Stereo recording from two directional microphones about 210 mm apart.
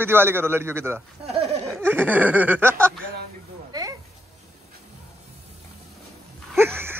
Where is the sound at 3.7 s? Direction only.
15° right (ahead or behind).